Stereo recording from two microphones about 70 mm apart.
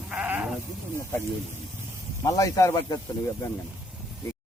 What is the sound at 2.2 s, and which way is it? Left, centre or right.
Speech, left.